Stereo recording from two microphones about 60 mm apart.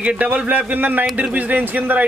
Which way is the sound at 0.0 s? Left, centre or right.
Right.